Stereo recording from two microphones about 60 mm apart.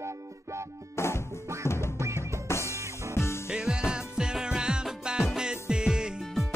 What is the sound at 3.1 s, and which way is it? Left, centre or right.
Music, left.